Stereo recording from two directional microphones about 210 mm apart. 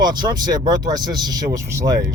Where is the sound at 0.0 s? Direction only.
20° right (ahead or behind).